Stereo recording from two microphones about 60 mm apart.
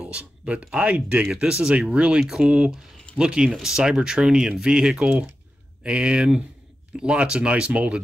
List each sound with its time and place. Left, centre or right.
0.0 s speech: right